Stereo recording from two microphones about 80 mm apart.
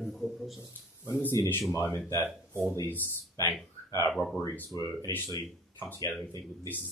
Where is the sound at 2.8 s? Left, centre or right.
Left.